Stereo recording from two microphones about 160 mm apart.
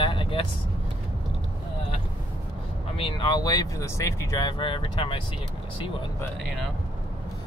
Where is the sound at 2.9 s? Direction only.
30° left (ahead or behind).